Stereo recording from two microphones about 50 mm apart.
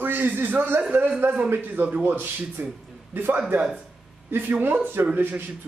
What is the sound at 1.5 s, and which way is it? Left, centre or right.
A man's voice, right.